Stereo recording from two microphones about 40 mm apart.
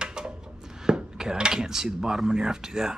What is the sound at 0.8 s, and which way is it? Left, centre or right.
Dishes, centre.